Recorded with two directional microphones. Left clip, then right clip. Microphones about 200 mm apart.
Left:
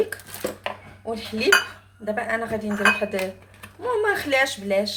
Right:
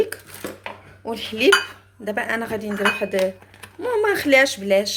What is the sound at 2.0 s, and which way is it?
Speech, 50° right (ahead or behind).